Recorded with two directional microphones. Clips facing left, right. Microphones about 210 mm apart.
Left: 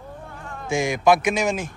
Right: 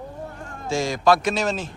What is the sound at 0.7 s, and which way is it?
A man's voice, 15° left (ahead or behind).